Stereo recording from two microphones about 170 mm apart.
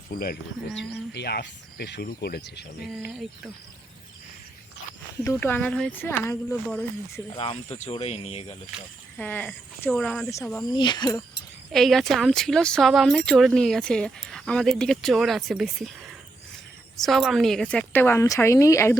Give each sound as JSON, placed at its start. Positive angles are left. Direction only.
{"t": 0.1, "sound": "speech", "side_deg": 60}
{"t": 0.8, "sound": "speech", "side_deg": 80}
{"t": 5.2, "sound": "speech", "side_deg": 15}
{"t": 7.3, "sound": "speech", "side_deg": 35}
{"t": 9.1, "sound": "speech", "side_deg": 10}
{"t": 10.7, "sound": "speech", "side_deg": 25}
{"t": 11.7, "sound": "speech", "side_deg": 0}
{"t": 17.0, "sound": "speech", "side_deg": 0}